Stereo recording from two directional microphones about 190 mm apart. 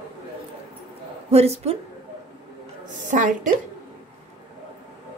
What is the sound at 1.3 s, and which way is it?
Speech, 30° right (ahead or behind).